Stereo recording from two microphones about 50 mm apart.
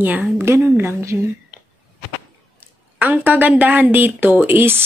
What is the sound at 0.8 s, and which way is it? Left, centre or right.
Speech, right.